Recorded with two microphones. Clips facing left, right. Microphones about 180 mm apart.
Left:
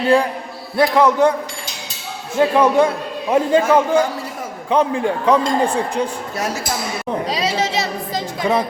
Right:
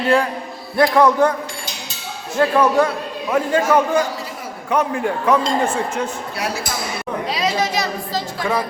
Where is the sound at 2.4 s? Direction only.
20° left (ahead or behind).